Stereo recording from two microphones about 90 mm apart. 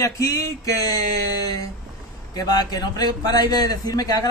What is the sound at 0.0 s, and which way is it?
A man's voice, 35° left (ahead or behind).